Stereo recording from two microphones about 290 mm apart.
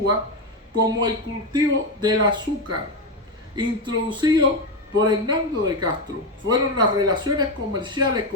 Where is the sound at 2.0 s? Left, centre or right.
Centre.